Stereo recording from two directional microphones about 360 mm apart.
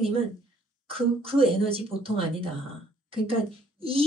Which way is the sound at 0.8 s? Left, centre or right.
Centre.